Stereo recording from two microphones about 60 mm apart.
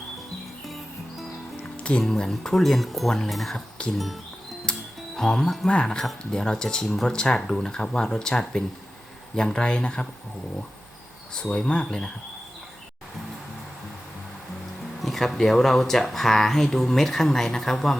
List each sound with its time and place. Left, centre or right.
1.8 s speech: centre
4.6 s music: centre
5.6 s speech: centre
11.3 s speech: centre
15.0 s speech: centre